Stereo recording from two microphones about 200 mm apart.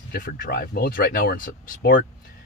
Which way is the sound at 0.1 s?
50° left (ahead or behind).